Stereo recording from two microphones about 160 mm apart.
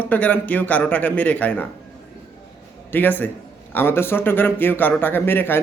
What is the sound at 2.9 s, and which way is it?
Speech, 10° left (ahead or behind).